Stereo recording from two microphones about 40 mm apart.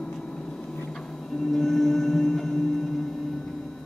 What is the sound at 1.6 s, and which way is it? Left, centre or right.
Music, centre.